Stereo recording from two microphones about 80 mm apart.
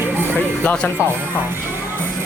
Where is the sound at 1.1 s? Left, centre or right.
Right.